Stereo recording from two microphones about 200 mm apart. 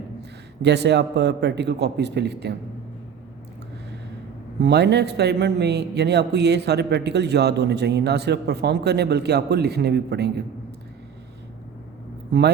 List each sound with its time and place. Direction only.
0.2 s a man's voice: 55° right (ahead or behind)
4.6 s a man's voice: 60° right (ahead or behind)
12.3 s a man's voice: 60° right (ahead or behind)